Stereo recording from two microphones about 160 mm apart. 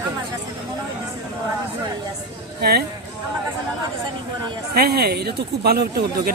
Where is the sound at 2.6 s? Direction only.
75° right (ahead or behind).